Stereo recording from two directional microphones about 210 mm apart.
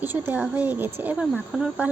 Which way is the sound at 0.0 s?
10° right (ahead or behind).